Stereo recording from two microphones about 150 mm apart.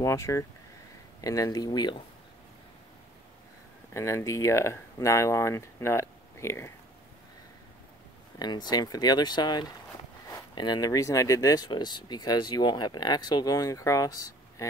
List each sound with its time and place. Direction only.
0.0 s speech: 20° left (ahead or behind)
3.9 s speech: 20° left (ahead or behind)
8.4 s speech: 30° left (ahead or behind)